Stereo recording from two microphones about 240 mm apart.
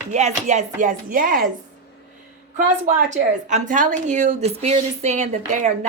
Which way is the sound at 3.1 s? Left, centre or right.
Right.